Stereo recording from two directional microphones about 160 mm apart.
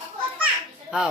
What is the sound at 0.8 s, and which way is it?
Speech, 5° right (ahead or behind).